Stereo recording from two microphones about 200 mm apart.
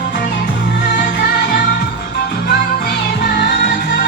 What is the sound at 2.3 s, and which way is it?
Music, 50° left (ahead or behind).